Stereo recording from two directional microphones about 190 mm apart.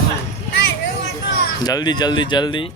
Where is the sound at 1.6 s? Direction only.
20° left (ahead or behind).